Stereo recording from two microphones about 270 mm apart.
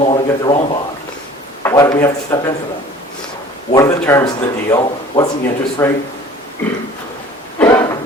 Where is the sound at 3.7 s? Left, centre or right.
Centre.